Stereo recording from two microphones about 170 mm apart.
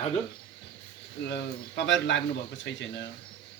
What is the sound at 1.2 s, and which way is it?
Speech, 90° left.